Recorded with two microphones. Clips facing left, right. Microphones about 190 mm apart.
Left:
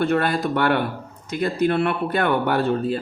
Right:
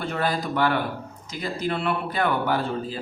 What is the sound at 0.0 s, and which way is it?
Speech, 65° left (ahead or behind).